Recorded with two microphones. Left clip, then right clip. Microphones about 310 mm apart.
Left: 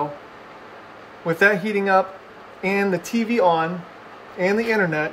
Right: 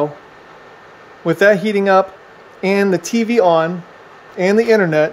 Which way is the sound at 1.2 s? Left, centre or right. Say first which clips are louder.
Right 6 dB; right.